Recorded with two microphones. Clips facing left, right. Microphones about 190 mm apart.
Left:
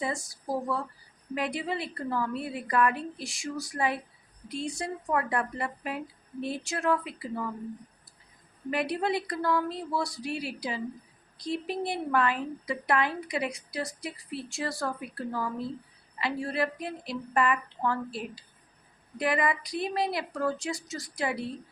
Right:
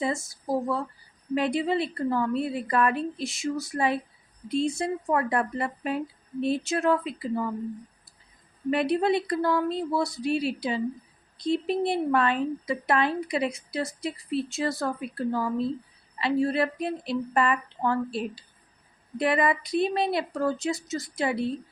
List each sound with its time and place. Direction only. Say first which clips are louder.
0.0 s a woman's voice: right 4 dB; 25° right (ahead or behind)
8.7 s a woman's voice: right 5 dB; 25° right (ahead or behind)